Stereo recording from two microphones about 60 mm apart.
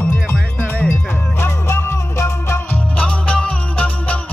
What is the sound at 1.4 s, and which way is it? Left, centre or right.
Music, left.